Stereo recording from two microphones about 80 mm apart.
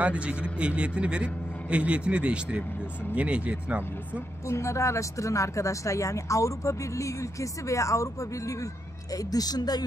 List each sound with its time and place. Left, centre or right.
0.0 s a man's voice: centre
4.5 s speech: left
9.1 s a woman's voice: left